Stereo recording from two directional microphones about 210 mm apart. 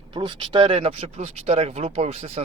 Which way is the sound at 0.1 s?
20° right (ahead or behind).